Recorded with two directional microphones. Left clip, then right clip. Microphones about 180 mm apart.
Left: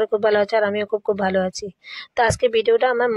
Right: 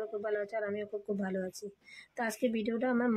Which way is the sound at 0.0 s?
55° left (ahead or behind).